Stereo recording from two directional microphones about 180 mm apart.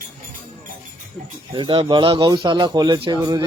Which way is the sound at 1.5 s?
30° right (ahead or behind).